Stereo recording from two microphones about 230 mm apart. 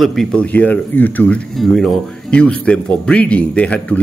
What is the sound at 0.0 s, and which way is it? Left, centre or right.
A man's voice, centre.